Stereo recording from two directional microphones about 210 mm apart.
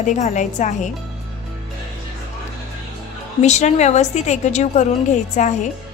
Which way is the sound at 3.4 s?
35° left (ahead or behind).